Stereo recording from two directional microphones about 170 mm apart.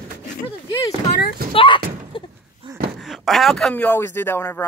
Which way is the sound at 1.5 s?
30° left (ahead or behind).